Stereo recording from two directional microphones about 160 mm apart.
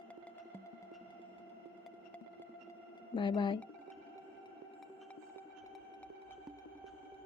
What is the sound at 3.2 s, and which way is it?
Speech, 30° left (ahead or behind).